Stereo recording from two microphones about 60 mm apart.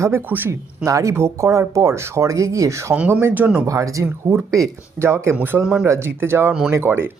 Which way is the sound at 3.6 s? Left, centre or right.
Right.